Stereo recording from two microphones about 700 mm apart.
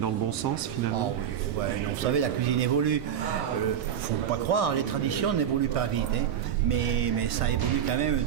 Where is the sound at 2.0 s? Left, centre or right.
Right.